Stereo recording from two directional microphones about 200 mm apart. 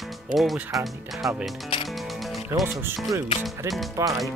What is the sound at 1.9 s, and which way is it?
Music, centre (ahead or behind).